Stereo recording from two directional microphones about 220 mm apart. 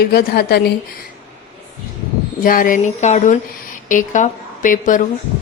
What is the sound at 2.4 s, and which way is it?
A woman's voice, 40° left (ahead or behind).